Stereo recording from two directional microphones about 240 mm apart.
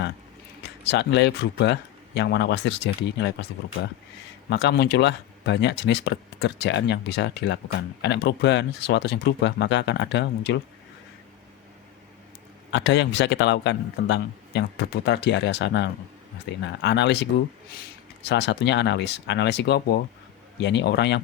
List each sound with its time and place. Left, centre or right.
0.6 s speech: left
12.7 s speech: left
18.3 s speech: left